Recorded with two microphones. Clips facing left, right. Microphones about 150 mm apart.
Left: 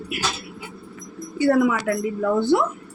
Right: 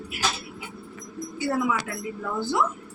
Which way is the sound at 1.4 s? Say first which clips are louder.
Left 8 dB; 65° left (ahead or behind).